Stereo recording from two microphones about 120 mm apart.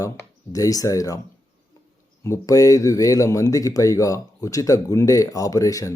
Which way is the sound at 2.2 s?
25° left (ahead or behind).